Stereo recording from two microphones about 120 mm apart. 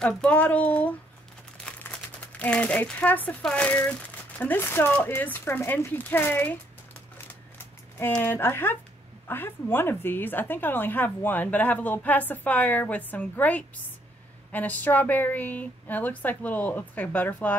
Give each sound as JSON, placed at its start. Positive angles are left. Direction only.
{"t": 0.0, "sound": "a woman's voice", "side_deg": 10}
{"t": 7.2, "sound": "a sound", "side_deg": 15}
{"t": 8.1, "sound": "a woman's voice", "side_deg": 15}